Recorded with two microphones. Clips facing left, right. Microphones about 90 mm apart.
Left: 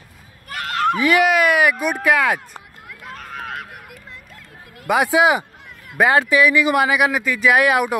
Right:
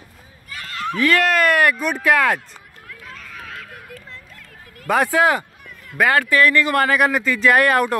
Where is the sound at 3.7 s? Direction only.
15° left (ahead or behind).